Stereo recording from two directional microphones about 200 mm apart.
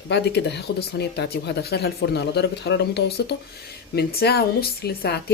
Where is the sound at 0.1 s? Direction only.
60° left (ahead or behind).